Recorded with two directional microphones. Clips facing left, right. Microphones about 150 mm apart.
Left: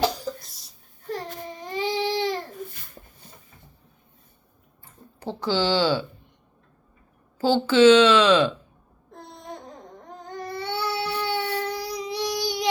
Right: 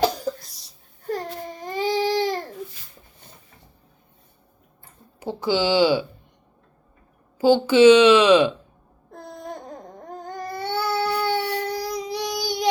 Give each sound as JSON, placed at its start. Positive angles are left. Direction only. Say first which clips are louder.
{"t": 0.4, "sound": "a sound", "louder": "right 1 dB", "side_deg": 0}
{"t": 1.7, "sound": "baby cry", "louder": "right 3 dB", "side_deg": -40}
{"t": 5.2, "sound": "a woman's voice", "louder": "right 2 dB", "side_deg": -10}
{"t": 7.3, "sound": "a woman's voice", "louder": "right 3 dB", "side_deg": -15}
{"t": 10.4, "sound": "baby cry", "louder": "right 3 dB", "side_deg": -45}